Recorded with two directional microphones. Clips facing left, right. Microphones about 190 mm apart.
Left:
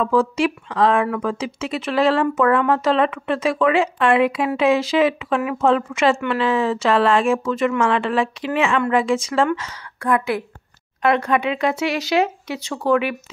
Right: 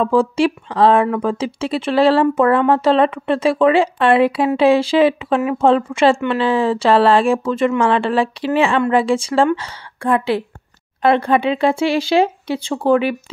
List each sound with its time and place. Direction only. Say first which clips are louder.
0.0 s speech: right 3 dB; 30° right (ahead or behind)